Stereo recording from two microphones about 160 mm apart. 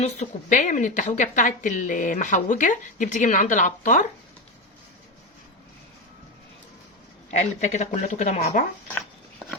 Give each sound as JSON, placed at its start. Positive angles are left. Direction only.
{"t": 0.0, "sound": "a woman's voice", "side_deg": 50}
{"t": 7.3, "sound": "a woman's voice", "side_deg": 45}